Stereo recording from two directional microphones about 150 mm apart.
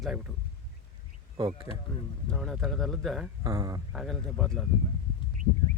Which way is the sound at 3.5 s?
20° right (ahead or behind).